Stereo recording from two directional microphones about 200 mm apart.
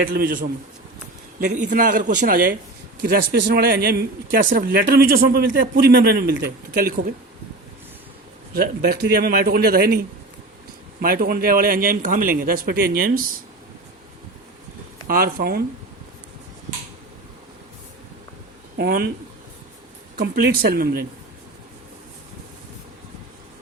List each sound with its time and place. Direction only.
0.0 s speech: 45° right (ahead or behind)
1.7 s speech: 40° right (ahead or behind)
8.5 s speech: 50° right (ahead or behind)
11.0 s speech: 45° right (ahead or behind)
15.0 s speech: 45° right (ahead or behind)
18.8 s speech: 50° right (ahead or behind)
20.1 s speech: 50° right (ahead or behind)